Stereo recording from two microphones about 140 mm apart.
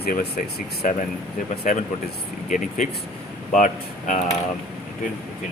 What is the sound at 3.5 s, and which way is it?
Speech, 65° left (ahead or behind).